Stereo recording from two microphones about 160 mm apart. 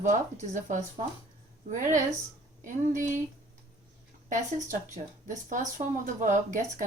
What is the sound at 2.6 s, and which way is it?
Speech, 55° right (ahead or behind).